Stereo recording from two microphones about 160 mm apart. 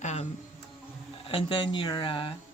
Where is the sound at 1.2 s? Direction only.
35° left (ahead or behind).